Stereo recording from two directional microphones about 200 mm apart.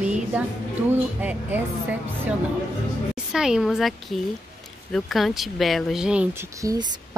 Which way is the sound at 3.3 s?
5° right (ahead or behind).